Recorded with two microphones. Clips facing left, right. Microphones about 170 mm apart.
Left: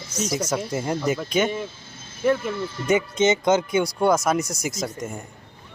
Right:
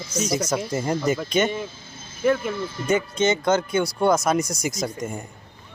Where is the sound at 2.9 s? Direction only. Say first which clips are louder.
Left 1 dB; 20° left (ahead or behind); by 5.2 s centre (ahead or behind).